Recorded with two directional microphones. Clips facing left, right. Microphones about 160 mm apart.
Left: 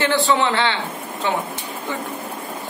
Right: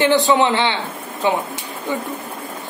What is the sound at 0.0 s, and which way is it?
A woman's voice, 15° right (ahead or behind).